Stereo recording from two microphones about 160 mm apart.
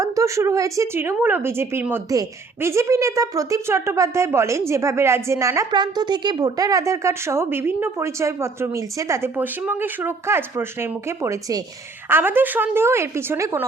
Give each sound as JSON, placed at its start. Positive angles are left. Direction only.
{"t": 0.0, "sound": "a woman's voice", "side_deg": -20}